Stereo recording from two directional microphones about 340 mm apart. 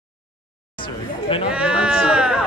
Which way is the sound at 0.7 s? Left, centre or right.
Centre.